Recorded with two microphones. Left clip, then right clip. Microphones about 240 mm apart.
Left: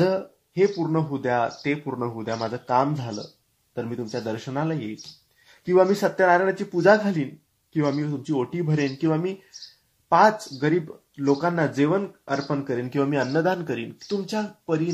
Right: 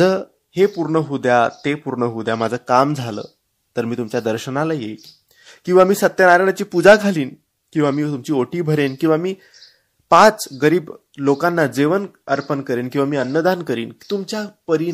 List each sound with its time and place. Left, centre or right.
0.0 s speech: right